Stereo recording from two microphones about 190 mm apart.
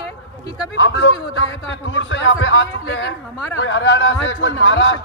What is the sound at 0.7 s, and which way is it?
A man's voice, 70° left (ahead or behind).